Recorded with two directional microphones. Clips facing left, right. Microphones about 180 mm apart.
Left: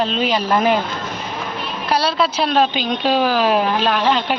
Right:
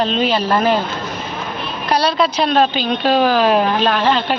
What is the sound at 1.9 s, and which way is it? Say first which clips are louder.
A woman's voice: right 2 dB; 5° left (ahead or behind).